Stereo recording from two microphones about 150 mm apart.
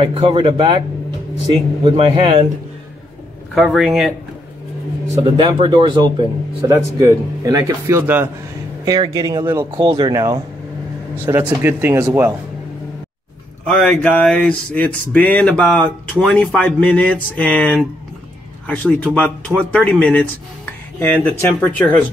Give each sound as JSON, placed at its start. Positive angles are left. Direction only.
{"t": 0.0, "sound": "speech", "side_deg": -40}
{"t": 3.5, "sound": "speech", "side_deg": 0}
{"t": 5.2, "sound": "a man's voice", "side_deg": -30}
{"t": 9.8, "sound": "a man's voice", "side_deg": -30}
{"t": 13.7, "sound": "a sound", "side_deg": 10}